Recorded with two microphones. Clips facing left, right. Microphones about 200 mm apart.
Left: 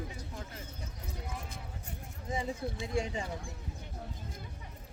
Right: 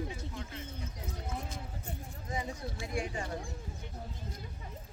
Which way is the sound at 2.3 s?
25° left (ahead or behind).